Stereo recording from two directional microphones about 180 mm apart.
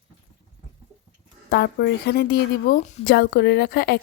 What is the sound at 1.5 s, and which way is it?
Speech, 65° left (ahead or behind).